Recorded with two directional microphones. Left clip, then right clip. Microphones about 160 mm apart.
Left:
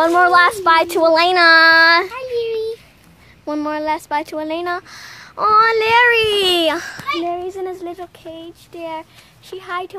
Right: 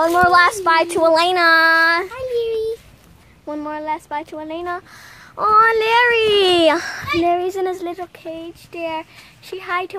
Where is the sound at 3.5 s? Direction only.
40° left (ahead or behind).